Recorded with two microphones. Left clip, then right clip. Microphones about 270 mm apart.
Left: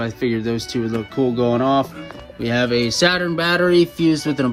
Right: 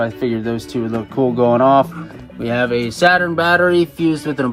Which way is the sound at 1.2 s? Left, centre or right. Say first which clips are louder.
Right 4 dB; right.